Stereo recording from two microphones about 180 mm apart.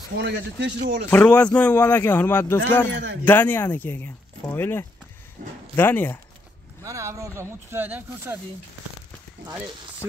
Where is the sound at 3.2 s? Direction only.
10° left (ahead or behind).